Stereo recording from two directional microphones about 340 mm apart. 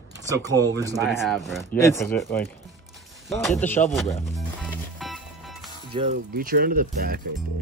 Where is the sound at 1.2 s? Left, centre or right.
Centre.